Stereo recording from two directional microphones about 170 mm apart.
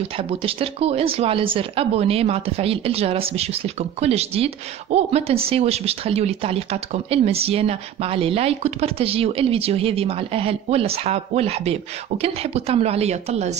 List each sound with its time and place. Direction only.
0.2 s speech: 35° right (ahead or behind)